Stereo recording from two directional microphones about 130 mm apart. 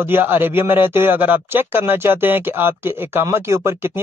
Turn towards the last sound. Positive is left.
turn(degrees=-20)  # may be behind; listen again after turning